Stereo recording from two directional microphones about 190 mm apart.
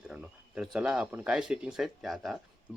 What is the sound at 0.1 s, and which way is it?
Speech, 5° right (ahead or behind).